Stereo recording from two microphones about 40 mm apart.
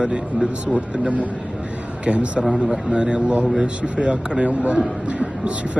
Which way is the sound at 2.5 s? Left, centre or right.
Centre.